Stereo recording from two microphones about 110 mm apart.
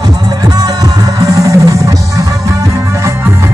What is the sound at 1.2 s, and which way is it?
Music, 30° right (ahead or behind).